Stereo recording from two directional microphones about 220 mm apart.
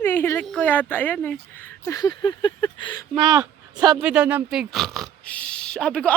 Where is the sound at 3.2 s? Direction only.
20° right (ahead or behind).